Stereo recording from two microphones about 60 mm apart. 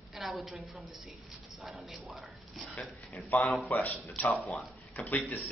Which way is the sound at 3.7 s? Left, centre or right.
Left.